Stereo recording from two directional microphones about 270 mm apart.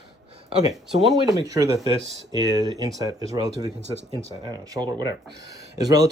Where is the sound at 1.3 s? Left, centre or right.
Centre.